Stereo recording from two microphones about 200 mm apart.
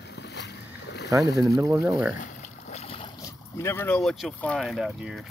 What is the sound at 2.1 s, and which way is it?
Boat, 35° left (ahead or behind).